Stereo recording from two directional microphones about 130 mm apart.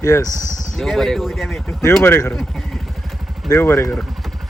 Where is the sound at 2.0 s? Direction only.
15° left (ahead or behind).